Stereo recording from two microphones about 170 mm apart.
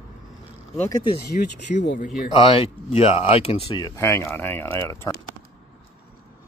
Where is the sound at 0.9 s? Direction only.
30° left (ahead or behind).